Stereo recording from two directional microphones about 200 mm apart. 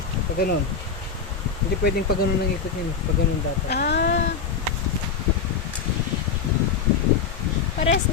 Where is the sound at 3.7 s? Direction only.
55° left (ahead or behind).